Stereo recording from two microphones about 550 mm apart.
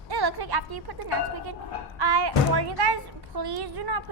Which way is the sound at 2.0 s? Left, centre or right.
Right.